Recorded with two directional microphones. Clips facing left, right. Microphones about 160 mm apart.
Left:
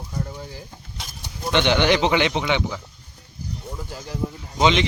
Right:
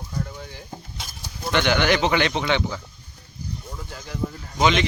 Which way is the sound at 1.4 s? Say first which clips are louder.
Left 2 dB; 20° left (ahead or behind).